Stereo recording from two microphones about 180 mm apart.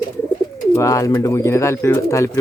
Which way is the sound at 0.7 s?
15° left (ahead or behind).